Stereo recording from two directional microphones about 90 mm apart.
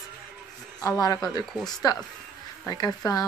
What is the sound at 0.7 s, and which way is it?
A man's voice, 40° left (ahead or behind).